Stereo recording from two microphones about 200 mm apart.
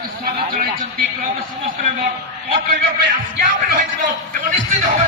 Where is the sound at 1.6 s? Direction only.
40° right (ahead or behind).